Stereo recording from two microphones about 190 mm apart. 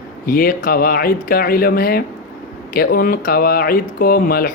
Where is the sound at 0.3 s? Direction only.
50° left (ahead or behind).